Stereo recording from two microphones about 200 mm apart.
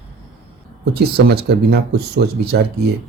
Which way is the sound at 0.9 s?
55° right (ahead or behind).